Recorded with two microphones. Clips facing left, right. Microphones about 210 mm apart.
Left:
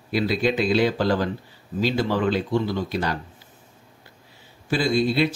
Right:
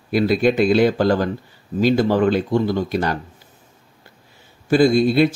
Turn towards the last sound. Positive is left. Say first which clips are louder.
# right 7 dB
turn(degrees=-50)  # may be behind; listen again after turning